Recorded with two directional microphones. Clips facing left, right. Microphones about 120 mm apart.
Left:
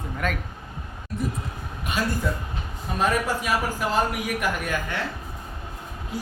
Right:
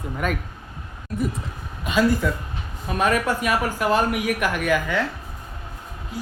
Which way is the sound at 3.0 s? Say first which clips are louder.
Right 3 dB; 65° right (ahead or behind).